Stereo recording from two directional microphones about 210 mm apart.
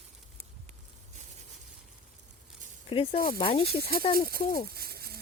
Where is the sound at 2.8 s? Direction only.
25° left (ahead or behind).